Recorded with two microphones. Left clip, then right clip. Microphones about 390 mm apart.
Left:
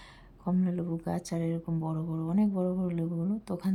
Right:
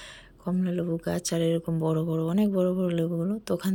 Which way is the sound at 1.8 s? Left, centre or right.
Centre.